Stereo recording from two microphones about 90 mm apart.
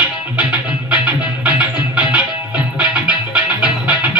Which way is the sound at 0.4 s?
15° right (ahead or behind).